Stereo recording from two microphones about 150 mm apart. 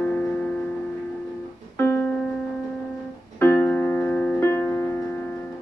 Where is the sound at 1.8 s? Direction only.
15° left (ahead or behind).